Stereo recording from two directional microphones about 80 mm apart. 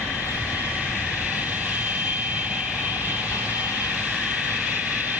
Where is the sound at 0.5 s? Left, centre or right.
Right.